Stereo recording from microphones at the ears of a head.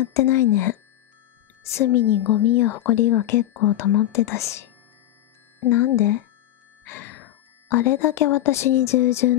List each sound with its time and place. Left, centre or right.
0.0 s a woman's voice: left